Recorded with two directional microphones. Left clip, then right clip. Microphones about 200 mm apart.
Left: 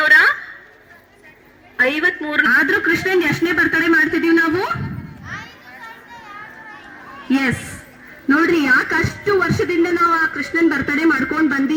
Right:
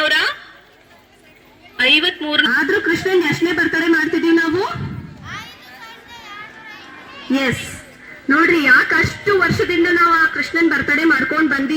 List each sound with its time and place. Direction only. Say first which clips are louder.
0.0 s a sound: left 5 dB; 45° right (ahead or behind)
1.7 s a woman's voice: right 2 dB; 45° right (ahead or behind)
2.5 s speech: left 2 dB; 35° left (ahead or behind)
4.3 s a woman's voice: even; 25° left (ahead or behind)
5.2 s children playing: even; 40° left (ahead or behind)
7.2 s a sound: even; 35° left (ahead or behind)
8.3 s speech: right 2 dB; 40° left (ahead or behind)